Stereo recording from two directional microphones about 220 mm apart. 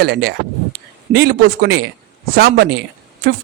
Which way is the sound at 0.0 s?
45° right (ahead or behind).